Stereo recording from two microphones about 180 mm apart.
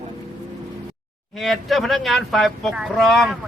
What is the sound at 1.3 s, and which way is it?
Speech, centre (ahead or behind).